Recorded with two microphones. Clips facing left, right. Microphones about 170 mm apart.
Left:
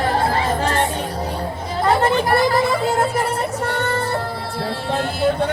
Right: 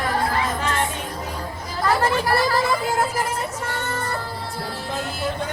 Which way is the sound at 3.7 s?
65° left (ahead or behind).